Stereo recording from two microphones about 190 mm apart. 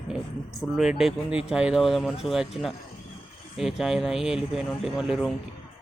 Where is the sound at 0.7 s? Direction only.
Centre (ahead or behind).